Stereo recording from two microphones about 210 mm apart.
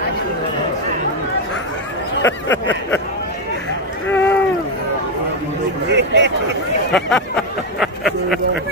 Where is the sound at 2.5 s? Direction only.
10° left (ahead or behind).